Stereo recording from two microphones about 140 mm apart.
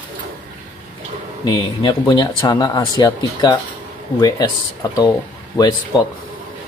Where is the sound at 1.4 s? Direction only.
30° left (ahead or behind).